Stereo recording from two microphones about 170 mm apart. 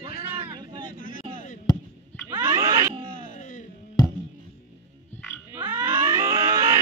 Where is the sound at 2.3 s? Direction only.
15° right (ahead or behind).